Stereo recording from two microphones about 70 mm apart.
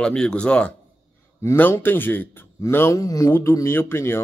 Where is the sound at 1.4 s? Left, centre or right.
Left.